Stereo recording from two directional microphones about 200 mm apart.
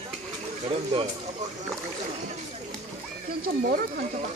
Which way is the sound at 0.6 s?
25° right (ahead or behind).